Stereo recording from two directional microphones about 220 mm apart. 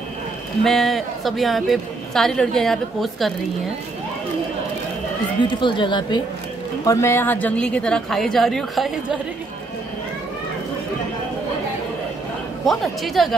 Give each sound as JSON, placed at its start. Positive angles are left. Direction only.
{"t": 0.7, "sound": "a woman's voice", "side_deg": 0}
{"t": 5.5, "sound": "a woman's voice", "side_deg": 20}
{"t": 12.6, "sound": "a woman's voice", "side_deg": 0}